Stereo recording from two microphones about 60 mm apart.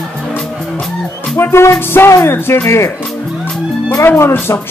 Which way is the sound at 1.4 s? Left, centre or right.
Left.